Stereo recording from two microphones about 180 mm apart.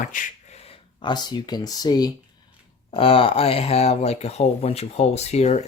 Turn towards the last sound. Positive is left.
turn(degrees=40)  # may be behind; listen again after turning